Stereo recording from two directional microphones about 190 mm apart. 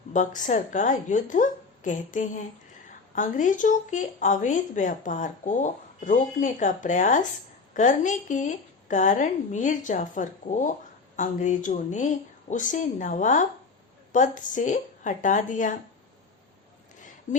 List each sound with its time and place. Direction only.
0.1 s a woman's voice: 40° left (ahead or behind)
17.3 s speech: 40° left (ahead or behind)